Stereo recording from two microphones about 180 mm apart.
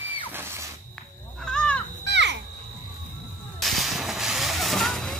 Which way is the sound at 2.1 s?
75° right (ahead or behind).